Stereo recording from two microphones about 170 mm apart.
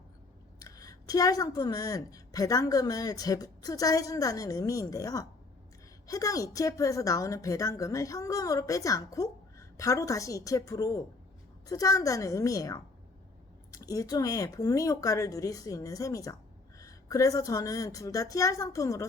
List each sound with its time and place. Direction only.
0.6 s speech: 20° left (ahead or behind)